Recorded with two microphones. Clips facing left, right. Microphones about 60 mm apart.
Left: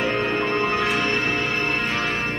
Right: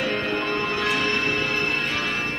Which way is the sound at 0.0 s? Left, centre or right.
Left.